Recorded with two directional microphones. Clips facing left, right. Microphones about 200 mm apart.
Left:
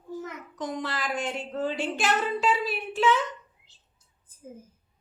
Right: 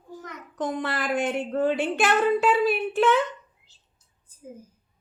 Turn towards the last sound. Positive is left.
turn(degrees=-10)  # may be behind; listen again after turning